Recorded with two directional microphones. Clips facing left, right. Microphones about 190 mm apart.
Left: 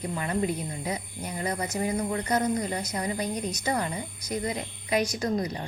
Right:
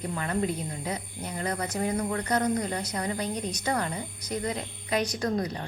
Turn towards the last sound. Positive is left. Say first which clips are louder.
# even
turn(degrees=10)  # may be behind; listen again after turning